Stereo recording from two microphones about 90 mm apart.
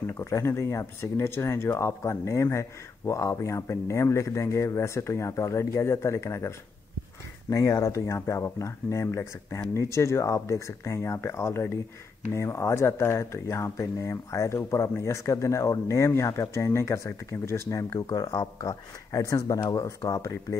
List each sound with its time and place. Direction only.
0.1 s speech: 35° left (ahead or behind)
17.9 s speech: 45° left (ahead or behind)